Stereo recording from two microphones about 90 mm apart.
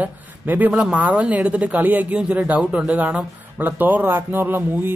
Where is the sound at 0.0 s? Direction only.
20° right (ahead or behind).